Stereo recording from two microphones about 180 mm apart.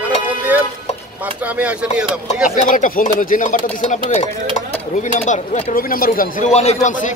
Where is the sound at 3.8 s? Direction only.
35° left (ahead or behind).